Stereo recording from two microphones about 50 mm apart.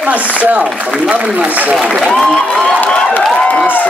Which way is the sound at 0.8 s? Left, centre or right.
Centre.